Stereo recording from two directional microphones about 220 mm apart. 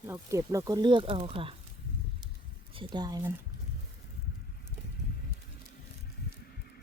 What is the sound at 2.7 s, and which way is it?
Speech, 20° right (ahead or behind).